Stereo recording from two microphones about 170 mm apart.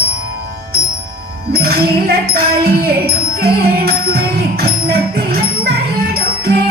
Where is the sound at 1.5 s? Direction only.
65° right (ahead or behind).